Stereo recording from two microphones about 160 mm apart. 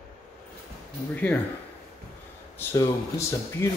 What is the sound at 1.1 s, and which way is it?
Speech, 10° left (ahead or behind).